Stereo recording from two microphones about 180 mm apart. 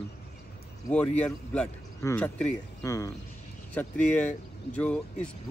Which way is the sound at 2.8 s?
20° left (ahead or behind).